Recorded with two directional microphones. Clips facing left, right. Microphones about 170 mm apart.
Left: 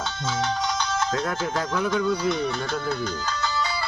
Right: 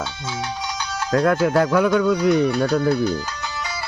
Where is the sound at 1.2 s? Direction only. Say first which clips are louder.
Right 10 dB; 60° right (ahead or behind).